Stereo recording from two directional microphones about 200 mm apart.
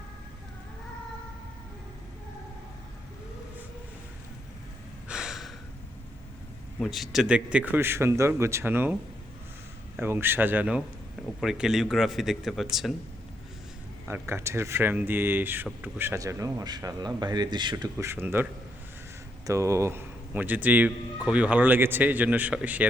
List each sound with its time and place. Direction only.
5.0 s gasp: 5° right (ahead or behind)
6.7 s a man's voice: centre (ahead or behind)
10.0 s a man's voice: 10° right (ahead or behind)
14.1 s a man's voice: 10° right (ahead or behind)
17.9 s a man's voice: 10° right (ahead or behind)
19.5 s a man's voice: 15° right (ahead or behind)